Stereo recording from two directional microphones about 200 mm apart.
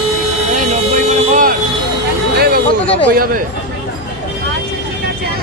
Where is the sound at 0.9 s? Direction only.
40° right (ahead or behind).